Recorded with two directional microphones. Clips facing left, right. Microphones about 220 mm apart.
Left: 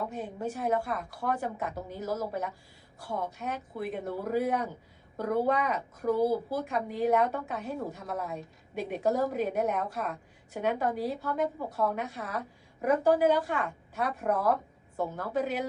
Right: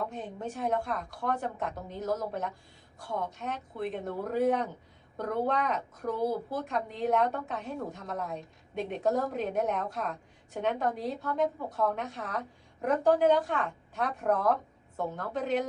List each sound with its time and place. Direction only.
0.0 s a woman's voice: 5° left (ahead or behind)